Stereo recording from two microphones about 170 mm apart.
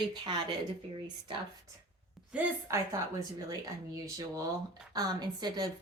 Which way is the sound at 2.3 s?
15° right (ahead or behind).